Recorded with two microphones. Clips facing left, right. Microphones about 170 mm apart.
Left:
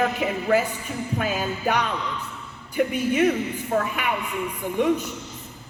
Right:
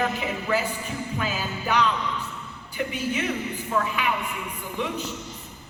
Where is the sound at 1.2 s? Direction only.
50° left (ahead or behind).